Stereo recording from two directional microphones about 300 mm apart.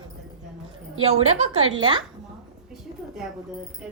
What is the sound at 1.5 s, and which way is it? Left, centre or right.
Speech, right.